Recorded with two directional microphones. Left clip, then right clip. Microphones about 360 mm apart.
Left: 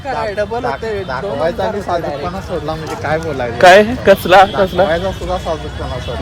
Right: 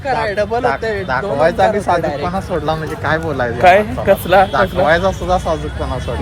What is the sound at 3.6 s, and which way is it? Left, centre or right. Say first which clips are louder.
A man's voice: left 4 dB; left.